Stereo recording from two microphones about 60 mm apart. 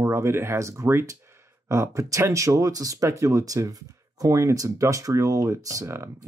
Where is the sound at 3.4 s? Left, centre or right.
Right.